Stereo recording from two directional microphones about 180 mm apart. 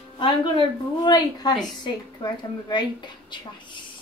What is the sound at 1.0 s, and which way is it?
A woman's voice, 25° left (ahead or behind).